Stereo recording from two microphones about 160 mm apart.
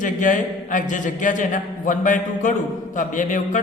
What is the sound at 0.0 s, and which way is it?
A man's voice, 55° left (ahead or behind).